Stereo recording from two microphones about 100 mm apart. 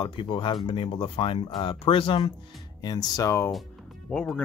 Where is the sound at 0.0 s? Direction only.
60° left (ahead or behind).